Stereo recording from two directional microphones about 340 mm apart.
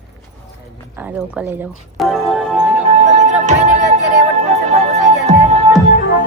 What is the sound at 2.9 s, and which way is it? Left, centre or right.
Music, right.